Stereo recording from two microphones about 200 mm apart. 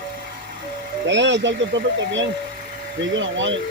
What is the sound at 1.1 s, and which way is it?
Speech, 65° right (ahead or behind).